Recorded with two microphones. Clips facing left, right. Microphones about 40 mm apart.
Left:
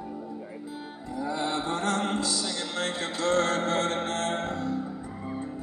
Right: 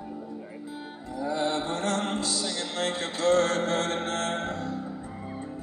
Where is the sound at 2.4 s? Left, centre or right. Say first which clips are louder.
Right 1 dB; centre.